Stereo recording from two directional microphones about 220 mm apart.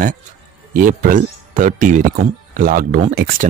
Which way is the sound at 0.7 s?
40° right (ahead or behind).